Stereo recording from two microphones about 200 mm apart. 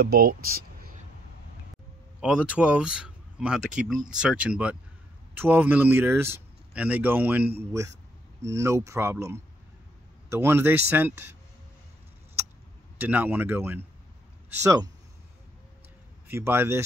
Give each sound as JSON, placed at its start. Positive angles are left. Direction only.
{"t": 0.0, "sound": "speech", "side_deg": -50}
{"t": 2.1, "sound": "speech", "side_deg": -5}
{"t": 12.9, "sound": "speech", "side_deg": -10}
{"t": 16.3, "sound": "speech", "side_deg": -10}